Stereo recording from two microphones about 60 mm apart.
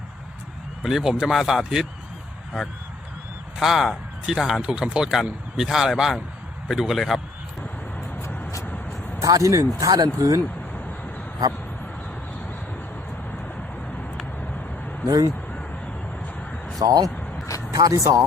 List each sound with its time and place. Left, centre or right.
0.8 s a man's voice: centre
3.6 s a man's voice: centre
9.1 s speech: right
9.8 s speech: right
10.2 s speech: right
15.0 s speech: right
16.8 s speech: right
17.7 s speech: right